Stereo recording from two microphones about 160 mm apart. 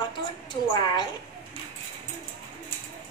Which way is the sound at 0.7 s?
25° left (ahead or behind).